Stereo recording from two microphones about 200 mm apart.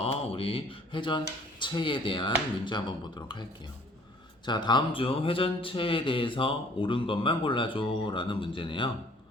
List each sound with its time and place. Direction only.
0.0 s speech: 25° left (ahead or behind)
4.4 s speech: 20° left (ahead or behind)